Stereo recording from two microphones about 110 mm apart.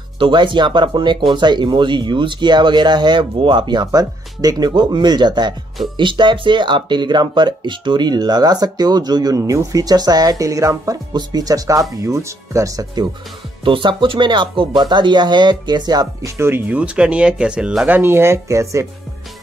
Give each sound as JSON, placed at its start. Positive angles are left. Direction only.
{"t": 0.2, "sound": "speech", "side_deg": -50}
{"t": 13.7, "sound": "speech", "side_deg": -50}